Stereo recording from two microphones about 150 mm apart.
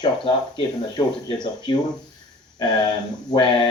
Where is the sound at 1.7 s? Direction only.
30° left (ahead or behind).